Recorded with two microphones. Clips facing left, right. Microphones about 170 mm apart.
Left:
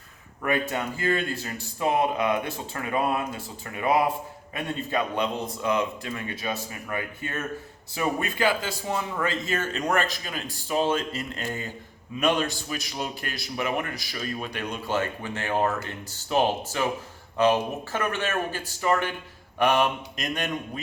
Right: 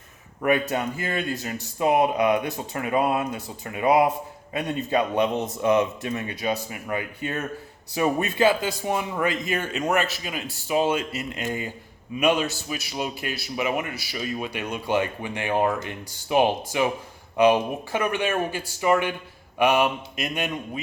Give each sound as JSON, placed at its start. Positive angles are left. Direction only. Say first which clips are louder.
{"t": 0.4, "sound": "a man's voice", "louder": "right 4 dB", "side_deg": -20}